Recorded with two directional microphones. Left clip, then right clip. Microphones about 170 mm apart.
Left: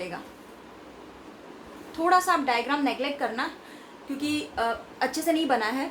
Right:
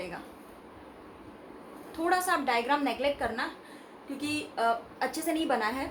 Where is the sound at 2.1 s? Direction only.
15° left (ahead or behind).